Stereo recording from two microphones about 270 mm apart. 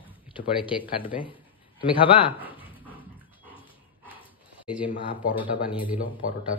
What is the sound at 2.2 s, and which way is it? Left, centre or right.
Speech, centre.